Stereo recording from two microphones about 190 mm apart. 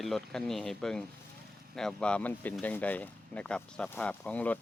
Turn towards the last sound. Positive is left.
turn(degrees=10)  # may be behind; listen again after turning